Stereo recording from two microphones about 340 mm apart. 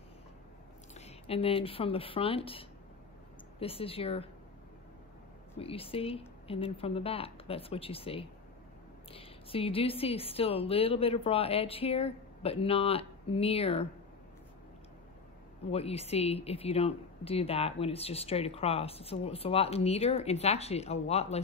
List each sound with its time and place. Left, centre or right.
0.9 s speech: centre
5.6 s speech: centre
15.7 s speech: centre